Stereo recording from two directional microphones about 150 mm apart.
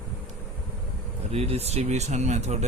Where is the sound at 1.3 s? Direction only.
45° right (ahead or behind).